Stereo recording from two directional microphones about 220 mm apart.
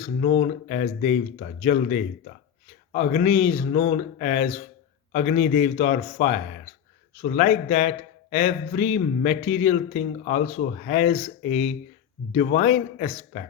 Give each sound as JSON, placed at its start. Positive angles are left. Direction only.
{"t": 0.0, "sound": "a man's voice", "side_deg": 35}